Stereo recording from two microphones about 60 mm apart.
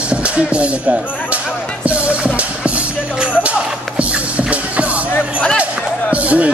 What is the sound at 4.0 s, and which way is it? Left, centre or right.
Music, right.